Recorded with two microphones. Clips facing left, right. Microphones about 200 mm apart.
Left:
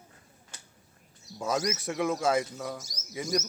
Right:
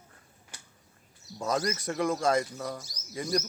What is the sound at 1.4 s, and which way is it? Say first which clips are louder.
A man's voice: even; 5° left (ahead or behind).